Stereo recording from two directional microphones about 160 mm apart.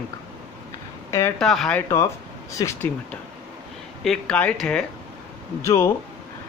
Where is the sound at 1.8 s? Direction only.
20° left (ahead or behind).